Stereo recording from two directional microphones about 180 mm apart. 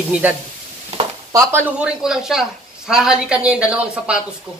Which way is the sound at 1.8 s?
5° right (ahead or behind).